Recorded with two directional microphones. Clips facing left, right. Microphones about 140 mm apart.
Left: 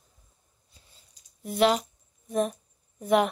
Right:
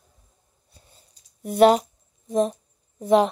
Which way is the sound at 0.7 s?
50° right (ahead or behind).